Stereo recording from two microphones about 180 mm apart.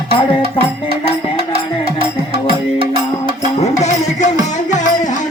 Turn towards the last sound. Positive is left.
turn(degrees=40)  # may be behind; listen again after turning